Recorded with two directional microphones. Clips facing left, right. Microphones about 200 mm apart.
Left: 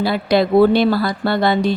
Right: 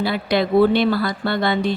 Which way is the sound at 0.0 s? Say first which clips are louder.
Left 4 dB; 35° left (ahead or behind).